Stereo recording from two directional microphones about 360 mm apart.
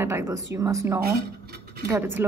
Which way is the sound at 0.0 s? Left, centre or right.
Centre.